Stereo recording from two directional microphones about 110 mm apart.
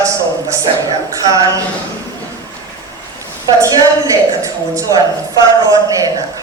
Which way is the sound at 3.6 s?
30° right (ahead or behind).